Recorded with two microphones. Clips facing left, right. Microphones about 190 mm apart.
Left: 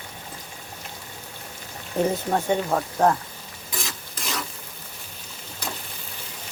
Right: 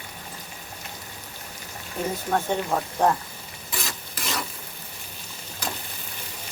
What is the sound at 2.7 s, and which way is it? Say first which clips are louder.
Speech: even; centre (ahead or behind).